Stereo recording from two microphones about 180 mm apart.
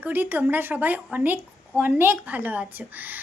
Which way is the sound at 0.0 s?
10° right (ahead or behind).